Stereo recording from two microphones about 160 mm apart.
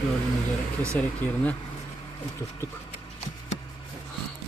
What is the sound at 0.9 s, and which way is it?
Speech, 10° left (ahead or behind).